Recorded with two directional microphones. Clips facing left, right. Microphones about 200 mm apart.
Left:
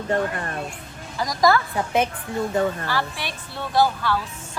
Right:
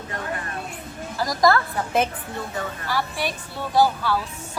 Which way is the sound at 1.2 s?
Centre (ahead or behind).